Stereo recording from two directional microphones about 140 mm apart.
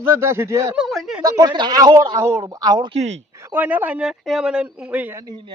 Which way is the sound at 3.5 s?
10° right (ahead or behind).